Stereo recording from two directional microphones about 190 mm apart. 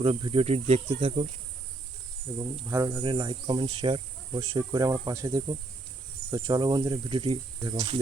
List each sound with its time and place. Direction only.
0.0 s speech: 25° right (ahead or behind)
2.4 s speech: 20° right (ahead or behind)